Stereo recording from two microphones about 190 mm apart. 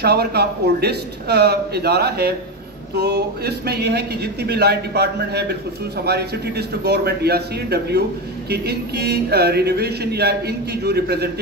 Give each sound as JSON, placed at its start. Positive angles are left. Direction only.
{"t": 0.0, "sound": "speech", "side_deg": -55}